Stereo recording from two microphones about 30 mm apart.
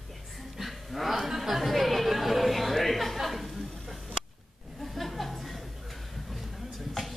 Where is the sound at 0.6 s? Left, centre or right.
Centre.